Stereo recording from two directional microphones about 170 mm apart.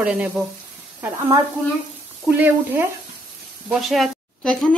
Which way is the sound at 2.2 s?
10° right (ahead or behind).